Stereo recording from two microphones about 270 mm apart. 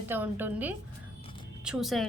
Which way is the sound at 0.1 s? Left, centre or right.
Centre.